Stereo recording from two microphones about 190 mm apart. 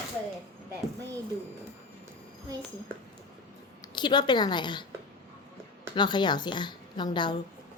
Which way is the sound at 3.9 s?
25° left (ahead or behind).